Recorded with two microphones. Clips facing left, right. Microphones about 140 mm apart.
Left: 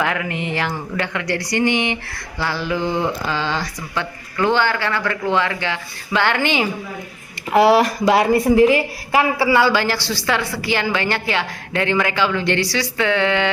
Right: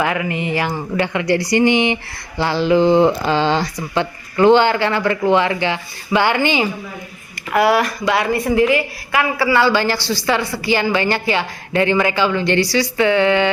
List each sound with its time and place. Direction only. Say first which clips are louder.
0.0 s a woman's voice: right 3 dB; 5° right (ahead or behind)
7.5 s a woman's voice: left 2 dB; 30° left (ahead or behind)
9.5 s speech: right 2 dB; 15° left (ahead or behind)
9.7 s a woman's voice: right 2 dB; centre (ahead or behind)